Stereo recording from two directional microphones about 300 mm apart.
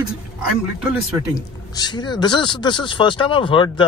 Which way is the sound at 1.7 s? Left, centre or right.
Centre.